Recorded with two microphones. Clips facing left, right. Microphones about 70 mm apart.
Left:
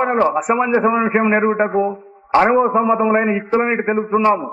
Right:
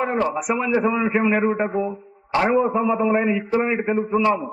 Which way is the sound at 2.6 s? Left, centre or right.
Left.